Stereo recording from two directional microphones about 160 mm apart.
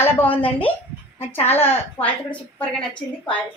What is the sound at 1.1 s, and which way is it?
Speech, 40° left (ahead or behind).